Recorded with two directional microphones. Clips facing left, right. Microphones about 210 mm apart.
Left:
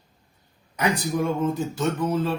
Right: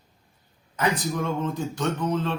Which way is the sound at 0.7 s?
10° left (ahead or behind).